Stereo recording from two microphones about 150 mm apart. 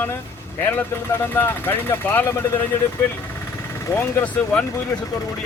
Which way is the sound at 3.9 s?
15° left (ahead or behind).